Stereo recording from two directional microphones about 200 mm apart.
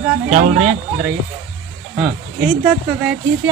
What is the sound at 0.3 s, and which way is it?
Speech, 40° right (ahead or behind).